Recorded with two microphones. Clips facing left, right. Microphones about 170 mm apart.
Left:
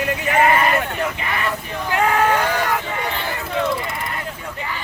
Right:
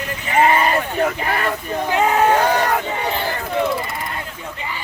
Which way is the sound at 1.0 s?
40° right (ahead or behind).